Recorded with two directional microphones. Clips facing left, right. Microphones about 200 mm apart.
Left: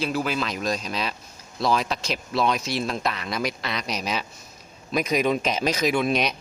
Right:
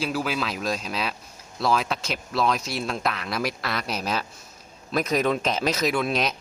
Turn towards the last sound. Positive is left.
turn(degrees=0)  # may be behind; listen again after turning